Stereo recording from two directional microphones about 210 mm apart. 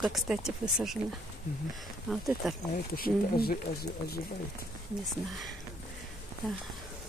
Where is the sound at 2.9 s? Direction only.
45° left (ahead or behind).